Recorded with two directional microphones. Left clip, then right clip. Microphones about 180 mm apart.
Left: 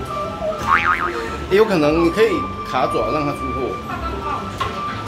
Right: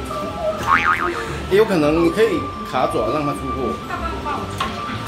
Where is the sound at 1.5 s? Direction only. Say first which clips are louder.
Left 1 dB; centre (ahead or behind).